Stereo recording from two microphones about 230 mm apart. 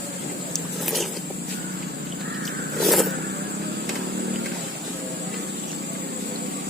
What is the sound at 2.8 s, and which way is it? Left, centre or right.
Vehicle, centre.